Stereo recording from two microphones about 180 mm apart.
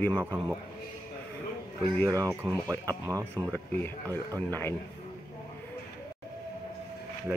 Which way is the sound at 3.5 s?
10° left (ahead or behind).